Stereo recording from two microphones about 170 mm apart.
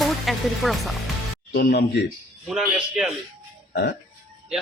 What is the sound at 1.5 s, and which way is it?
Speech, 70° left (ahead or behind).